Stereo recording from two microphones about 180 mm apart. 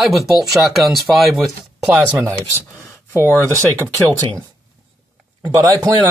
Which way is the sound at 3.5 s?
15° right (ahead or behind).